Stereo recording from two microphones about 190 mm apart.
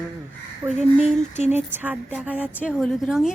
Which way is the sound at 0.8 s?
35° left (ahead or behind).